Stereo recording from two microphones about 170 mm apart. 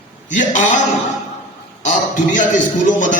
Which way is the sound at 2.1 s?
50° left (ahead or behind).